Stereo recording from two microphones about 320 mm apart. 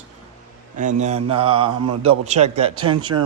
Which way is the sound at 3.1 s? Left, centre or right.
Right.